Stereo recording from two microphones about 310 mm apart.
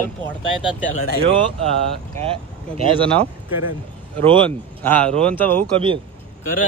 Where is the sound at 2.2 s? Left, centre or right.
Centre.